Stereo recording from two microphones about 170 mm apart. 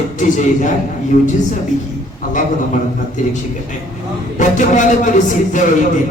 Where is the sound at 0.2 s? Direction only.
50° left (ahead or behind).